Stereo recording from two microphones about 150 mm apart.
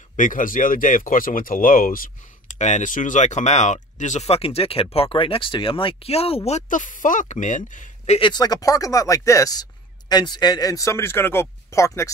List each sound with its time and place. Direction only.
0.1 s speech: 60° left (ahead or behind)
8.2 s speech: 25° left (ahead or behind)